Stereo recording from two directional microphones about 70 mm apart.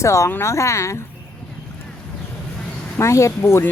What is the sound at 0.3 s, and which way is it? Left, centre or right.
Speech, left.